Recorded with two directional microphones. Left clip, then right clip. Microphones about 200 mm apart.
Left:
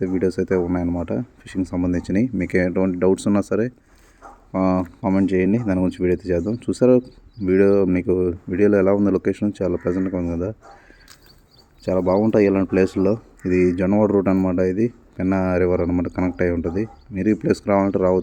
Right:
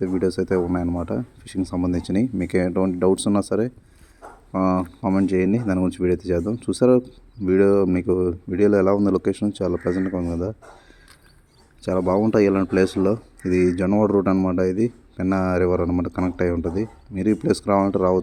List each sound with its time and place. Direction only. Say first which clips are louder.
0.0 s speech: left 1 dB; centre (ahead or behind)
4.5 s speech: left 1 dB; centre (ahead or behind)
11.9 s speech: left 2 dB; 5° right (ahead or behind)